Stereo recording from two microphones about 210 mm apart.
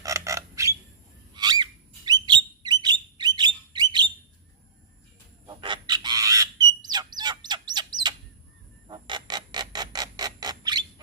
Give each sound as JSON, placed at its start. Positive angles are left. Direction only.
{"t": 0.0, "sound": "squawk", "side_deg": -15}
{"t": 1.3, "sound": "bird", "side_deg": -20}
{"t": 5.5, "sound": "fowl", "side_deg": -20}
{"t": 8.9, "sound": "a sound", "side_deg": -20}